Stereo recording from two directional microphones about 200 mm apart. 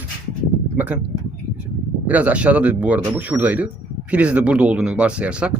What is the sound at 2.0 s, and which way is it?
Speech, 5° right (ahead or behind).